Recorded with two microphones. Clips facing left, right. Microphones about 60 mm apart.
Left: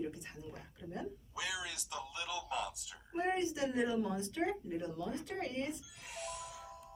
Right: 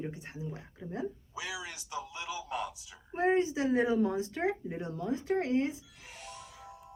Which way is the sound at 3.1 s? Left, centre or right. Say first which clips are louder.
Right 7 dB; right.